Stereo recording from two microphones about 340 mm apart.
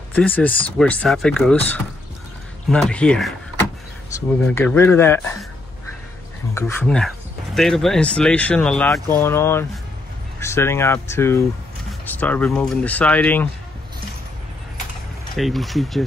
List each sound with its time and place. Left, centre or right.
0.1 s speech: centre
4.5 s speech: centre
6.5 s speech: centre
15.3 s speech: centre